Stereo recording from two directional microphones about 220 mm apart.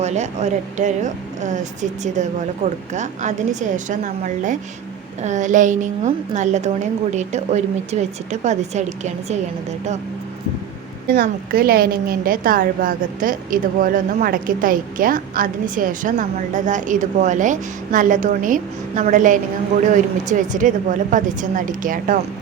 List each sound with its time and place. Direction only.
0.0 s a woman's voice: 30° right (ahead or behind)
11.1 s a woman's voice: 40° right (ahead or behind)